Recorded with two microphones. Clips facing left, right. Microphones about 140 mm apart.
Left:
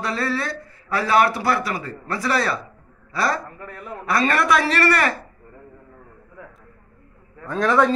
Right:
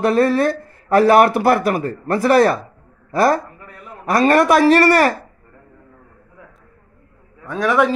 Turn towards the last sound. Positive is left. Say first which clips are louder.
# right 1 dB
turn(degrees=-10)  # may be behind; listen again after turning